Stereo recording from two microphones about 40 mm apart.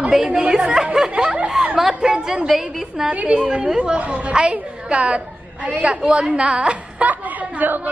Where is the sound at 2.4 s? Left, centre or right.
Centre.